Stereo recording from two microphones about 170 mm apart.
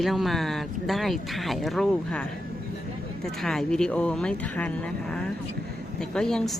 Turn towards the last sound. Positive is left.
turn(degrees=5)  # may be behind; listen again after turning